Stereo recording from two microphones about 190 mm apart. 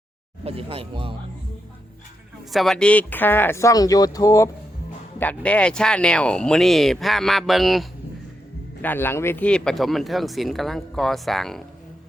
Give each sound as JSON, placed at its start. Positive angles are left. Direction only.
{"t": 0.4, "sound": "speech", "side_deg": -30}
{"t": 2.5, "sound": "speech", "side_deg": 0}
{"t": 5.2, "sound": "speech", "side_deg": 5}
{"t": 8.8, "sound": "speech", "side_deg": 10}